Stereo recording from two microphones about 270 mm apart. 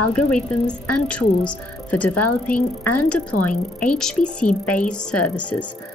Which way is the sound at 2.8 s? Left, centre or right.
Left.